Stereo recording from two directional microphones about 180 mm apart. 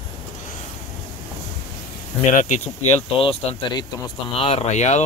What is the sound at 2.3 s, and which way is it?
Speech, 40° left (ahead or behind).